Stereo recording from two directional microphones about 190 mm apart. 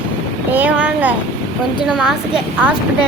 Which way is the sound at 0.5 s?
10° right (ahead or behind).